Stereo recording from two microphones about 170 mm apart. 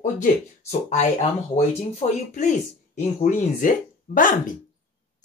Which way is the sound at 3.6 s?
50° left (ahead or behind).